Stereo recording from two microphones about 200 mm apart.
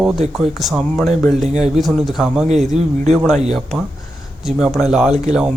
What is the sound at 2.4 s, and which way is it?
Speech, 35° right (ahead or behind).